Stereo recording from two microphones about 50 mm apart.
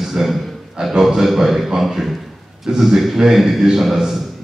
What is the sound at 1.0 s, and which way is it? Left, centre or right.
A man's voice, centre.